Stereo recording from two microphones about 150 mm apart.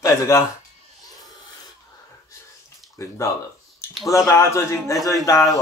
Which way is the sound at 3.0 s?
20° left (ahead or behind).